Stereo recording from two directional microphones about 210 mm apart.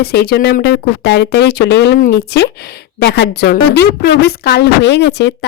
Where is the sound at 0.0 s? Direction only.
50° left (ahead or behind).